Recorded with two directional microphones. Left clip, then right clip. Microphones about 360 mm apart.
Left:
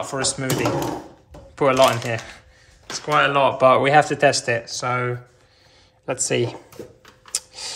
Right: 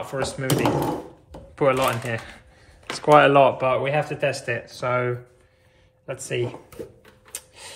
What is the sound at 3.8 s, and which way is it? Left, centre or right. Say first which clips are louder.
Speech: left 8 dB; centre.